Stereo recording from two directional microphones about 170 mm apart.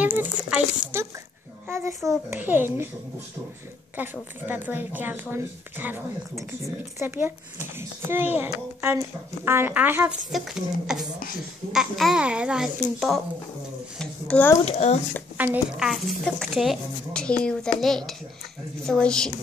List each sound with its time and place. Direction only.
0.0 s speech: 10° right (ahead or behind)
3.9 s speech: 10° right (ahead or behind)
13.9 s speech: 5° left (ahead or behind)
14.6 s speech: 40° left (ahead or behind)
15.3 s speech: 10° right (ahead or behind)